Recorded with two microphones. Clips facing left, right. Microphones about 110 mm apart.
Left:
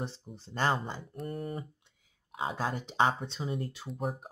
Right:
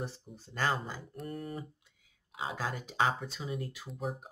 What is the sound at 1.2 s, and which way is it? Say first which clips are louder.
Speech: left 3 dB; 45° left (ahead or behind).